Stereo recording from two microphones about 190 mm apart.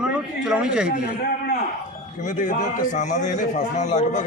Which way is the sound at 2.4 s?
40° left (ahead or behind).